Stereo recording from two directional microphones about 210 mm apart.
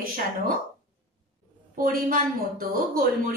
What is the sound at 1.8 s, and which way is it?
A woman's voice, 40° right (ahead or behind).